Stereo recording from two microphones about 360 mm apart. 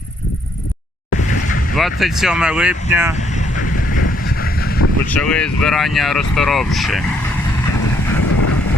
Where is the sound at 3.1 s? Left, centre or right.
Centre.